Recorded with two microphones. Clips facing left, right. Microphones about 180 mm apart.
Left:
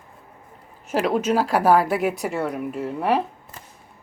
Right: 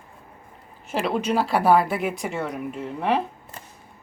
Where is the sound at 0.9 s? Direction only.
5° left (ahead or behind).